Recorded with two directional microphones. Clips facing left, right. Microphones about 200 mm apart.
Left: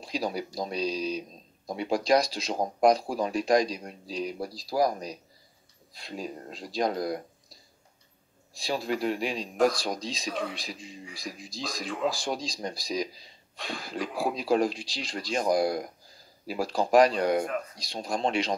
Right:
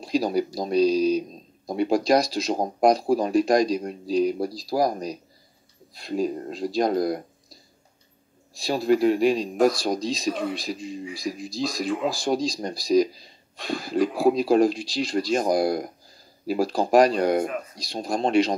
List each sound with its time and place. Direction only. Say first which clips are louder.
0.0 s speech: right 8 dB; 40° right (ahead or behind)
8.5 s speech: right 9 dB; 40° right (ahead or behind)
9.6 s speech: right 2 dB; 10° right (ahead or behind)
9.8 s speech: right 7 dB; 40° right (ahead or behind)
10.3 s speech: right 5 dB; 5° right (ahead or behind)
10.6 s speech: right 9 dB; 40° right (ahead or behind)
11.1 s speech: right 9 dB; 10° right (ahead or behind)
12.1 s speech: right 8 dB; 40° right (ahead or behind)
14.3 s speech: right 6 dB; 40° right (ahead or behind)
17.5 s speech: right 1 dB; 5° right (ahead or behind)
17.8 s speech: right 5 dB; 40° right (ahead or behind)